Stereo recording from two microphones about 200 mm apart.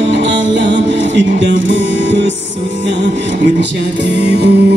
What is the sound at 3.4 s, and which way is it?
Music, 60° right (ahead or behind).